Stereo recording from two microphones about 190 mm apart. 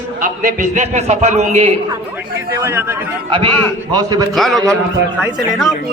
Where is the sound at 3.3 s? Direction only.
25° right (ahead or behind).